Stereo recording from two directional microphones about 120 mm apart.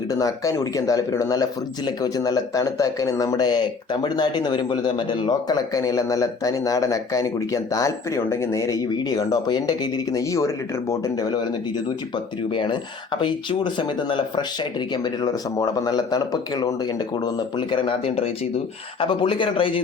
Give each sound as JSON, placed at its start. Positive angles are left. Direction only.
{"t": 0.1, "sound": "speech", "side_deg": 30}
{"t": 12.5, "sound": "speech", "side_deg": 45}
{"t": 17.3, "sound": "speech", "side_deg": 45}